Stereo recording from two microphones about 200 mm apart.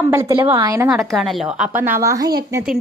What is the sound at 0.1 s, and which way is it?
Speech, 15° right (ahead or behind).